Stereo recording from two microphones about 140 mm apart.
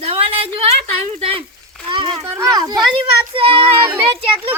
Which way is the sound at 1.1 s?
40° right (ahead or behind).